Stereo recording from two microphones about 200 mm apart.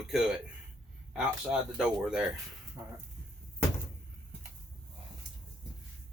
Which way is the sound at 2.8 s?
15° right (ahead or behind).